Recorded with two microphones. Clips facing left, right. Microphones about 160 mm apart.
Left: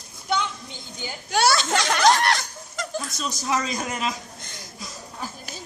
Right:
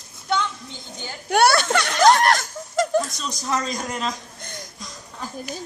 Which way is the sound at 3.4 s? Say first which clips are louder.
Right 1 dB; 5° left (ahead or behind).